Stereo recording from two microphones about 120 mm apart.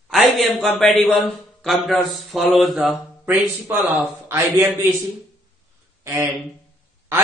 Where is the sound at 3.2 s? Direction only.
15° right (ahead or behind).